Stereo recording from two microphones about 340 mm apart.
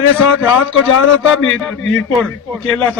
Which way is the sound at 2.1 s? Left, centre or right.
Centre.